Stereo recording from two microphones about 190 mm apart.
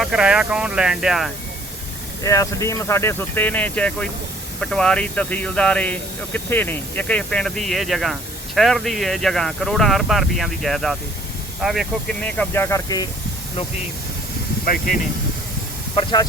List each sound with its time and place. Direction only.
0.0 s speech: 5° right (ahead or behind)
2.2 s speech: 15° left (ahead or behind)
14.7 s speech: 45° left (ahead or behind)